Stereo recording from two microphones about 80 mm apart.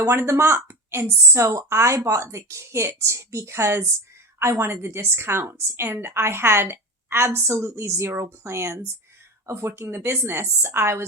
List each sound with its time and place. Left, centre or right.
0.0 s a woman's voice: right